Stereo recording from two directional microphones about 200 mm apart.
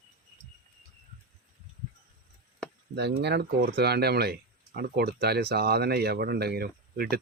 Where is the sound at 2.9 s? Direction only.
55° right (ahead or behind).